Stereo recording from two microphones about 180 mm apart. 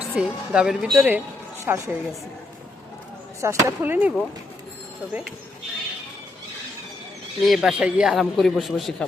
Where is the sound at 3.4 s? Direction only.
10° right (ahead or behind).